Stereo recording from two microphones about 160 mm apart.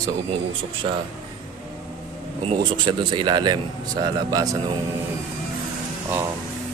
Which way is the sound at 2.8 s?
30° right (ahead or behind).